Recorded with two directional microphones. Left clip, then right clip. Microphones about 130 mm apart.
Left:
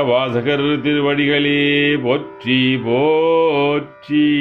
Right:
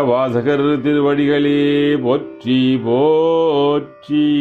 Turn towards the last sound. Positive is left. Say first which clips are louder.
# even
turn(degrees=-25)  # may be behind; listen again after turning